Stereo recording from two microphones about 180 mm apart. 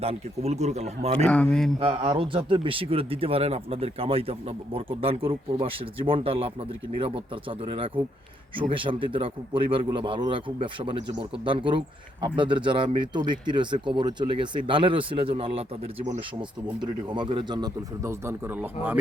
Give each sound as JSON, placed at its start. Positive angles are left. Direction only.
{"t": 0.0, "sound": "speech", "side_deg": -35}
{"t": 1.2, "sound": "speech", "side_deg": 5}
{"t": 1.8, "sound": "speech", "side_deg": -30}